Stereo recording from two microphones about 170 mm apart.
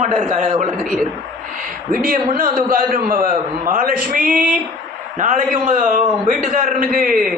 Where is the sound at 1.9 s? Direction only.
55° right (ahead or behind).